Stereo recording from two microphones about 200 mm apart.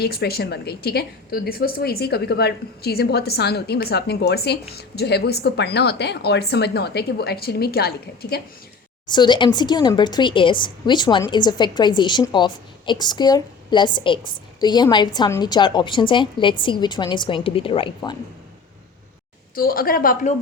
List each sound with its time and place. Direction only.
0.0 s a woman's voice: 50° left (ahead or behind)
9.0 s a woman's voice: 20° left (ahead or behind)
19.5 s a woman's voice: 45° left (ahead or behind)